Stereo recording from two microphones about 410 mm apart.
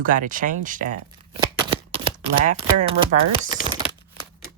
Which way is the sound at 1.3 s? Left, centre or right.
Centre.